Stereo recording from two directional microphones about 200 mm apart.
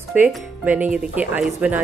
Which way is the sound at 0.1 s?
10° right (ahead or behind).